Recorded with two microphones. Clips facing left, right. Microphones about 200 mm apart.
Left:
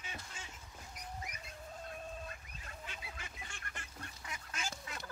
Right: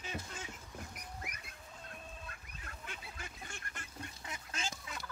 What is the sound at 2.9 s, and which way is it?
Goose, 40° right (ahead or behind).